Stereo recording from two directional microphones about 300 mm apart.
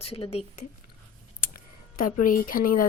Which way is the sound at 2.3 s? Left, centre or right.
Left.